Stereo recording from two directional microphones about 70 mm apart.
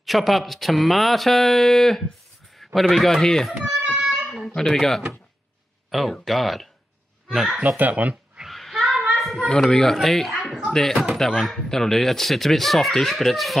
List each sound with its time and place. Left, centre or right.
0.0 s speech: centre
3.8 s a sound: centre
4.6 s speech: centre
7.6 s speech: right
8.5 s child singing: centre
9.2 s a sound: centre
9.5 s speech: centre